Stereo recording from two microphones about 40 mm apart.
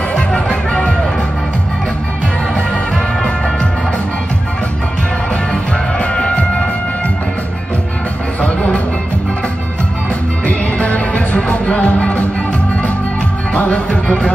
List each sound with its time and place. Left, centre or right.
0.1 s music: left
5.5 s music: left
8.4 s music: left
10.4 s music: left
13.5 s music: left